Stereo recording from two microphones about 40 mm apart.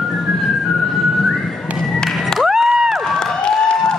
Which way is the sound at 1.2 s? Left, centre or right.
Centre.